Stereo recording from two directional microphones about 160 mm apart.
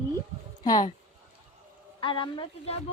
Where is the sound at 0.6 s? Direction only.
25° left (ahead or behind).